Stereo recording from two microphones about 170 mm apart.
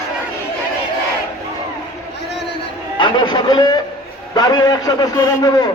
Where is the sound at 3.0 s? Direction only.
25° left (ahead or behind).